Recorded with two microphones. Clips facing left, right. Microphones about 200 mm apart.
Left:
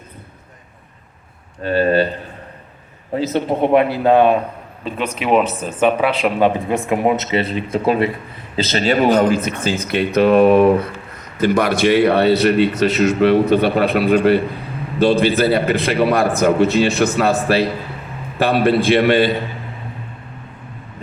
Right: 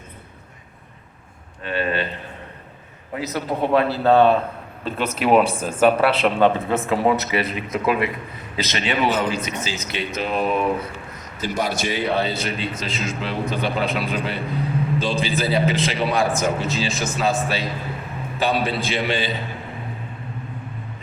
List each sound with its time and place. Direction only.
1.6 s speech: 40° left (ahead or behind)
3.2 s speech: 25° left (ahead or behind)
4.9 s speech: 5° right (ahead or behind)
6.2 s a man's voice: 10° left (ahead or behind); by 19.4 s 55° left (ahead or behind)